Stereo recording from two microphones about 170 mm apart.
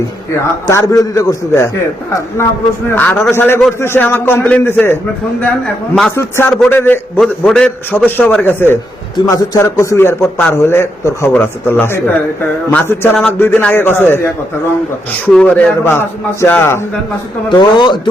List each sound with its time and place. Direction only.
0.7 s a man's voice: 15° left (ahead or behind)
2.9 s a man's voice: 10° left (ahead or behind)
15.3 s a man's voice: 5° left (ahead or behind)
17.5 s speech: 25° left (ahead or behind)